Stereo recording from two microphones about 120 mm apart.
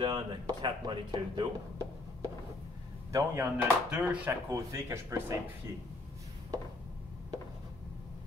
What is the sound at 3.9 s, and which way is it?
Speech, 10° right (ahead or behind).